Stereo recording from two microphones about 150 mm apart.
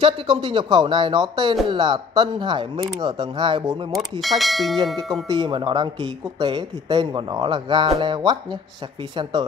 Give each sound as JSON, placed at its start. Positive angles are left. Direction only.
{"t": 0.0, "sound": "speech", "side_deg": -35}
{"t": 3.9, "sound": "speech", "side_deg": 0}
{"t": 5.3, "sound": "speech", "side_deg": -30}